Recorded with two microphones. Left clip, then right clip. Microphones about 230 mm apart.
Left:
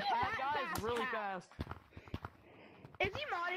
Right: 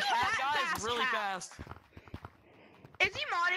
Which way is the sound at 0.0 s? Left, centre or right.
Right.